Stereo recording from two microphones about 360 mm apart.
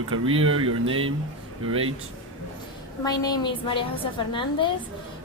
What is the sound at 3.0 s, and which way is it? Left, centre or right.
A woman's voice, centre.